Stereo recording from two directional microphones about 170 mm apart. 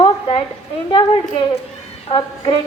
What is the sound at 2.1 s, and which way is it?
Speech, 35° left (ahead or behind).